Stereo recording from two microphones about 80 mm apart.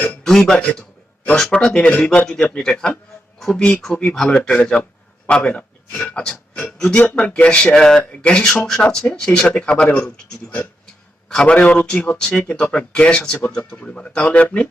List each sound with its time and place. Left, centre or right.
0.3 s a man's voice: centre